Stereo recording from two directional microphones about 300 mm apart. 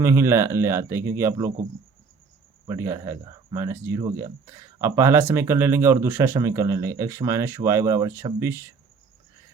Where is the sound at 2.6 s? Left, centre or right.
Centre.